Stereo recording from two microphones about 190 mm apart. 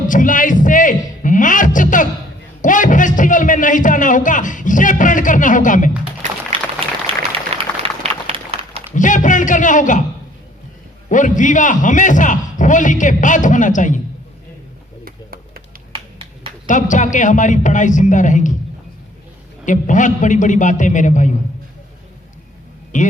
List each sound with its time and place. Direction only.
0.1 s a sound: 45° left (ahead or behind)
2.6 s music: 45° left (ahead or behind)
6.8 s applause: 30° right (ahead or behind)
8.3 s a sound: 30° right (ahead or behind)
9.0 s a man's voice: 40° left (ahead or behind)
11.1 s a man's voice: 40° left (ahead or behind)
15.0 s a sound: 50° right (ahead or behind)
15.9 s finger snapping: 30° right (ahead or behind)
16.6 s a man's voice: 40° left (ahead or behind)
19.6 s a man's voice: 40° left (ahead or behind)
22.9 s a man's voice: 40° left (ahead or behind)